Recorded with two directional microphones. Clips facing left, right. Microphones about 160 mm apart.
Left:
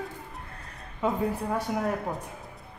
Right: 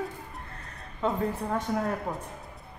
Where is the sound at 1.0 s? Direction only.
10° left (ahead or behind).